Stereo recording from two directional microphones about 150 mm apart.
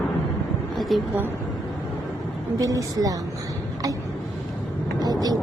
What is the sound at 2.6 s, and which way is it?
Speech, 25° right (ahead or behind).